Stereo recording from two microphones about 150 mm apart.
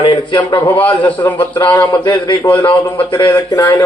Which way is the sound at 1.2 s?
15° left (ahead or behind).